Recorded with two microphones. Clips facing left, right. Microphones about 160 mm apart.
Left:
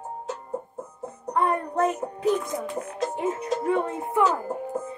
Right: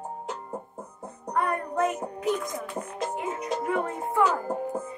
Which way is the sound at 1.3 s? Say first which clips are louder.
Left 3 dB; 25° left (ahead or behind).